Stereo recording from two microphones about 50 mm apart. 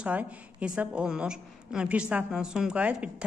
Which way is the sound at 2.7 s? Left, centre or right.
Right.